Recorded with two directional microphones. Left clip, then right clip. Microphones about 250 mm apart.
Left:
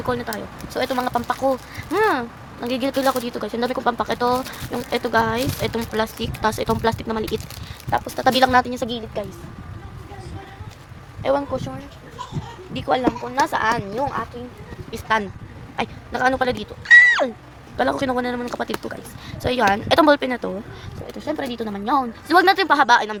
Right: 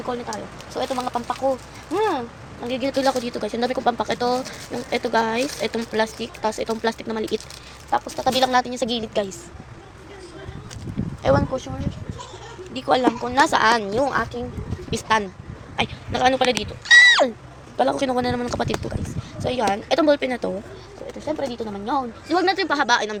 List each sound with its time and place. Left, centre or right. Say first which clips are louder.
0.1 s speech: left 3 dB; left; by 7.4 s centre
7.9 s speech: left 2 dB; centre
11.2 s speech: right 1 dB; centre
12.7 s speech: right 1 dB; centre
17.7 s speech: even; centre
19.4 s speech: left 3 dB; centre
21.2 s a woman's voice: even; left; by 23.1 s centre